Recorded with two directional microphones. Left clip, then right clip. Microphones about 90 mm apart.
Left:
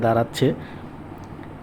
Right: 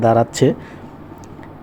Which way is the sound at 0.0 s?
45° right (ahead or behind).